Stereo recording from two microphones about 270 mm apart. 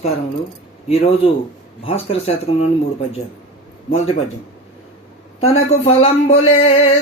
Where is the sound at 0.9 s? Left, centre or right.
Left.